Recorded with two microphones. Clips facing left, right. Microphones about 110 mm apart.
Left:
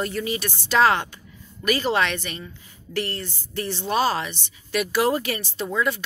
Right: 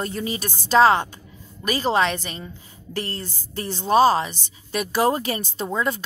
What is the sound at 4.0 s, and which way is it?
A woman's voice, 25° right (ahead or behind).